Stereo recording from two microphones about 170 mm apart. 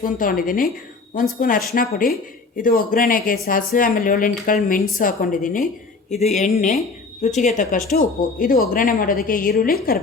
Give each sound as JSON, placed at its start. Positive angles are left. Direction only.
{"t": 0.0, "sound": "a woman's voice", "side_deg": 55}